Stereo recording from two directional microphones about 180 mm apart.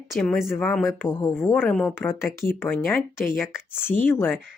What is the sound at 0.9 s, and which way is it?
Speech, 10° left (ahead or behind).